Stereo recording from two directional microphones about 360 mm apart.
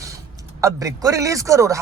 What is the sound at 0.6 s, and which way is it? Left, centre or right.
Speech, centre.